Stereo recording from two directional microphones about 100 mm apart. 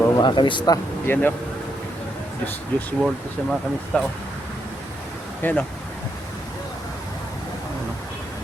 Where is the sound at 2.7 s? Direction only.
15° left (ahead or behind).